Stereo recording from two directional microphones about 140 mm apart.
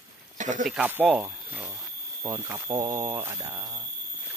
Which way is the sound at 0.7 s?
10° right (ahead or behind).